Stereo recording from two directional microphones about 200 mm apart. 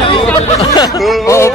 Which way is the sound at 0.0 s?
25° left (ahead or behind).